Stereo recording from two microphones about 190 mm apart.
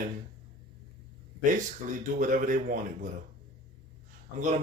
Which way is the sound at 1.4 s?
40° right (ahead or behind).